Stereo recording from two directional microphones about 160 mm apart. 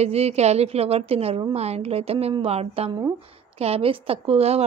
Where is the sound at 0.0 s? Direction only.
40° right (ahead or behind).